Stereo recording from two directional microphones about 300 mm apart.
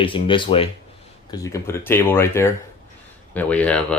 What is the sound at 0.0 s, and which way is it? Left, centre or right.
Speech, centre.